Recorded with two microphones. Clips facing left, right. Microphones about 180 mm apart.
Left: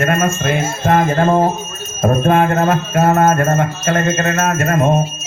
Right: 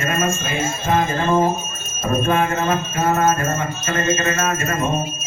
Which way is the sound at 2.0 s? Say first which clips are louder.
Left 5 dB; 55° left (ahead or behind).